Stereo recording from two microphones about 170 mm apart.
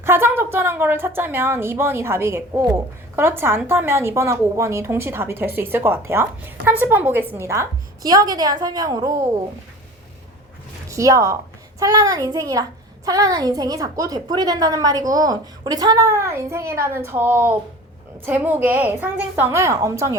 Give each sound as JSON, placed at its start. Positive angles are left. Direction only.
{"t": 0.0, "sound": "a woman's voice", "side_deg": -15}
{"t": 10.8, "sound": "a woman's voice", "side_deg": -20}